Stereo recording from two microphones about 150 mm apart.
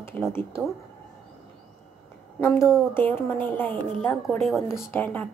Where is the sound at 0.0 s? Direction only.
15° left (ahead or behind).